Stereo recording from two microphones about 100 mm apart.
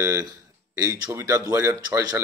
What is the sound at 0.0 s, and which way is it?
A man's voice, 25° right (ahead or behind).